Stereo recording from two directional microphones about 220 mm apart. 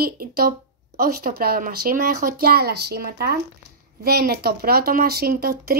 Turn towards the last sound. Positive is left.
turn(degrees=-45)  # may be behind; listen again after turning